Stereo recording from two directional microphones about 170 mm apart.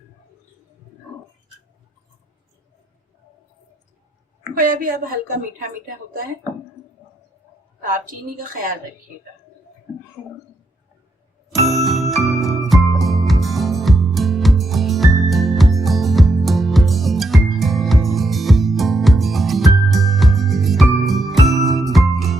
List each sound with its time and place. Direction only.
4.5 s a woman's voice: 55° right (ahead or behind)
7.9 s a woman's voice: 55° right (ahead or behind)
11.4 s music: centre (ahead or behind)